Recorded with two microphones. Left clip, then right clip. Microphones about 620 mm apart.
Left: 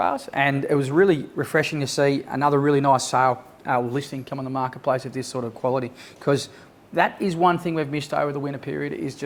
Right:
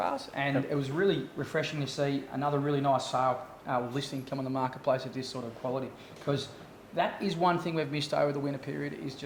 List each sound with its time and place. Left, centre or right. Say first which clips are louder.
0.0 s speech: left 10 dB; left
3.9 s speech: left 6 dB; left